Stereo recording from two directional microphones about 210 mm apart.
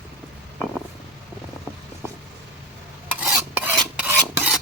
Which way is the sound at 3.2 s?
5° right (ahead or behind).